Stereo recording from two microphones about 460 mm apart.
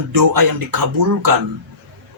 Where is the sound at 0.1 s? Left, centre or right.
Right.